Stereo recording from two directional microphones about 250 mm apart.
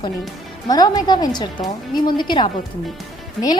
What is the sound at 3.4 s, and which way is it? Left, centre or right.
Speech, centre.